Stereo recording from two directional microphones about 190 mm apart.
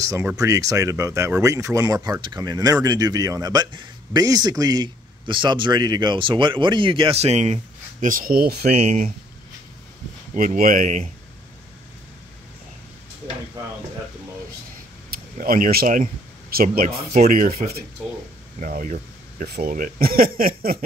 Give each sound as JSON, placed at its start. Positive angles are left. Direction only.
{"t": 0.0, "sound": "a man's voice", "side_deg": -15}
{"t": 8.8, "sound": "speech", "side_deg": -35}
{"t": 10.3, "sound": "speech", "side_deg": -45}
{"t": 15.0, "sound": "speech", "side_deg": -50}
{"t": 19.4, "sound": "speech", "side_deg": -55}